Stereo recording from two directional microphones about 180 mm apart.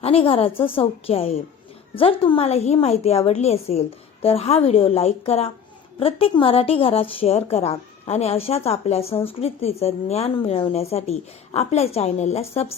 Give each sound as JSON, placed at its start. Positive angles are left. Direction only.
{"t": 0.0, "sound": "a woman's voice", "side_deg": 35}